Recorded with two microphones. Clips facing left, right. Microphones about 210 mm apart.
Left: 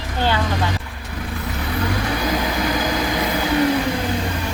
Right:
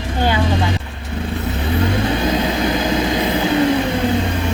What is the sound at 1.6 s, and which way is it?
Vehicle, 25° right (ahead or behind).